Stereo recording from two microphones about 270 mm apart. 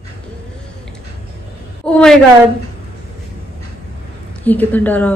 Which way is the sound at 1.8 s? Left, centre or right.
Centre.